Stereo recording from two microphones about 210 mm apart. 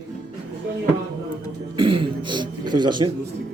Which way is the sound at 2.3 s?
20° right (ahead or behind).